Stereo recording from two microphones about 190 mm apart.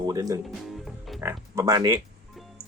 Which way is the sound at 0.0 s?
20° right (ahead or behind).